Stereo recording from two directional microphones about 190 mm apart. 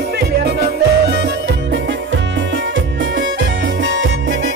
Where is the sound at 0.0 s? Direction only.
55° right (ahead or behind).